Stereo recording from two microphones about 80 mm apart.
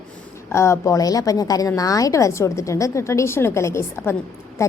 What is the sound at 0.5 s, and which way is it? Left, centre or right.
A woman's voice, left.